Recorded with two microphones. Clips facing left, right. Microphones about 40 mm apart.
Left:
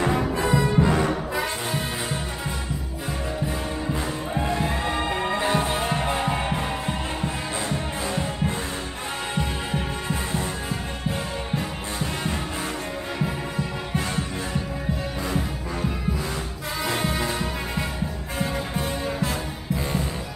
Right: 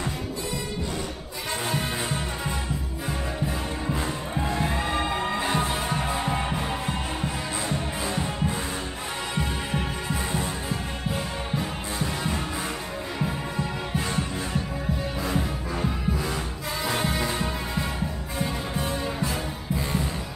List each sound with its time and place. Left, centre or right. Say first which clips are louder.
0.0 s music: left 8 dB; left
3.8 s music: left 1 dB; centre
9.4 s heart sounds: even; centre
12.0 s music: left 1 dB; centre
15.2 s music: even; centre